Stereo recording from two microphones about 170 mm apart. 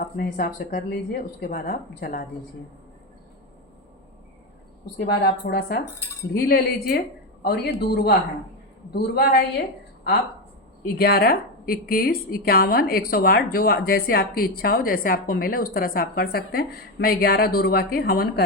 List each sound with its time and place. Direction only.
0.0 s a woman's voice: 60° left (ahead or behind)
4.9 s a woman's voice: 65° left (ahead or behind)
10.8 s a woman's voice: 65° left (ahead or behind)